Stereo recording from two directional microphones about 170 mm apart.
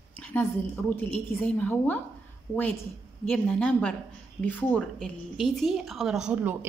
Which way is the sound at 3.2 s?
5° left (ahead or behind).